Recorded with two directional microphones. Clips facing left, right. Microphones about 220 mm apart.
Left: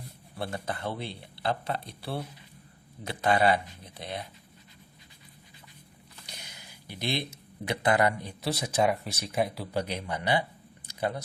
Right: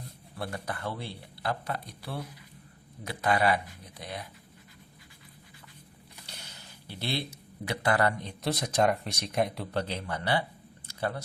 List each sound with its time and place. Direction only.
0.3 s speech: 25° left (ahead or behind)
6.2 s speech: 15° left (ahead or behind)
10.8 s a sound: 15° left (ahead or behind)